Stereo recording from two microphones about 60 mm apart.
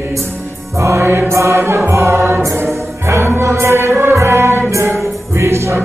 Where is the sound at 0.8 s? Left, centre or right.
Right.